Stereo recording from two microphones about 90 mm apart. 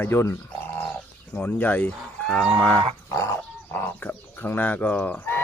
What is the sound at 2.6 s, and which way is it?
Speech, 15° left (ahead or behind).